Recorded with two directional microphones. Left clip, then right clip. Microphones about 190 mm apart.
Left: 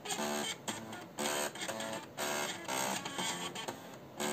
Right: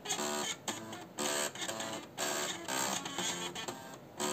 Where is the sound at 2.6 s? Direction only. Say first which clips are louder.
Even; 10° right (ahead or behind).